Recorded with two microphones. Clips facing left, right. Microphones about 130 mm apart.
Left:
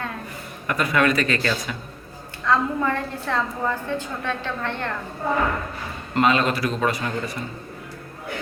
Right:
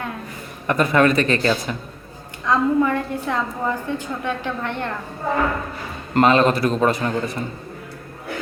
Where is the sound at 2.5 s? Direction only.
15° right (ahead or behind).